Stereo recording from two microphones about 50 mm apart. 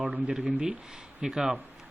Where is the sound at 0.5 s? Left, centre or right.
Right.